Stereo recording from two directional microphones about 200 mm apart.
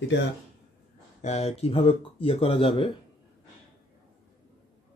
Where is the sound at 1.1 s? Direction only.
35° left (ahead or behind).